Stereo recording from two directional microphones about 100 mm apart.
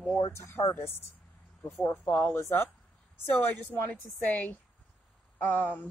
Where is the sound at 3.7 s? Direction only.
20° left (ahead or behind).